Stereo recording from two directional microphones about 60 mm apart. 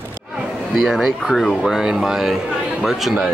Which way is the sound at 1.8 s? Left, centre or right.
Centre.